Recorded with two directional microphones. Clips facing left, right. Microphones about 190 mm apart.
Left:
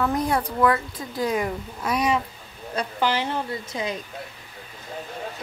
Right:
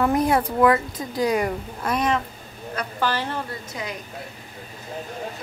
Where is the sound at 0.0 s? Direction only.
5° right (ahead or behind); by 3.9 s 20° left (ahead or behind).